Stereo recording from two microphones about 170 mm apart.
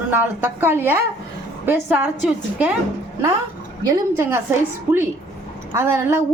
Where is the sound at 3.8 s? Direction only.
20° right (ahead or behind).